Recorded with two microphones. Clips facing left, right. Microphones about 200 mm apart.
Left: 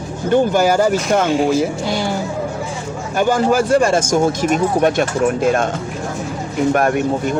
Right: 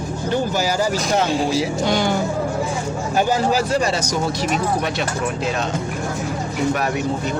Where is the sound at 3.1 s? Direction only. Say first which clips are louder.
Left 4 dB; 50° left (ahead or behind).